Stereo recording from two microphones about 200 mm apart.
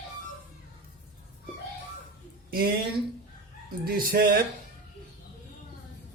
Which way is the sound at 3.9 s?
45° right (ahead or behind).